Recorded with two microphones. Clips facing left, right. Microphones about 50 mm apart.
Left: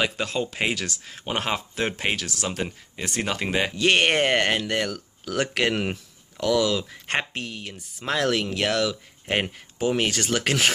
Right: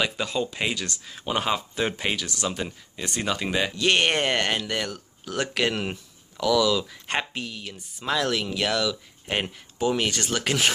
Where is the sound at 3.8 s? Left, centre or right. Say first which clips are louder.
Left 2 dB; left.